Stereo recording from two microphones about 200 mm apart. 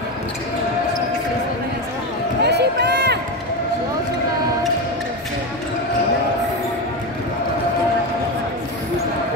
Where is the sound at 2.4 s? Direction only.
55° right (ahead or behind).